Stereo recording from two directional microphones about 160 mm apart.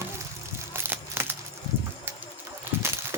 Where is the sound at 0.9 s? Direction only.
15° right (ahead or behind).